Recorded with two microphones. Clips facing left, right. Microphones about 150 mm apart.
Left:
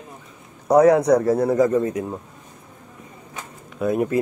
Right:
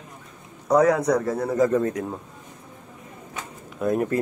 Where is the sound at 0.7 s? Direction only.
25° left (ahead or behind).